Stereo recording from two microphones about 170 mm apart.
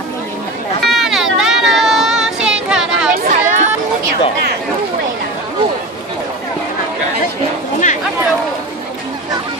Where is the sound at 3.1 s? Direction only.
50° right (ahead or behind).